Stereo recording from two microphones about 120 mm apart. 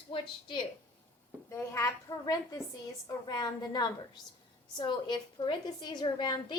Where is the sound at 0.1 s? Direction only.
45° left (ahead or behind).